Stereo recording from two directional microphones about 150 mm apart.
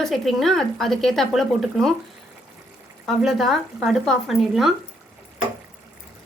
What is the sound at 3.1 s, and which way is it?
A woman's voice, centre (ahead or behind).